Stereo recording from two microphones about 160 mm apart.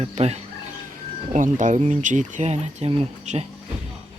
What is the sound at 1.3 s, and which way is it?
Speech, 50° right (ahead or behind).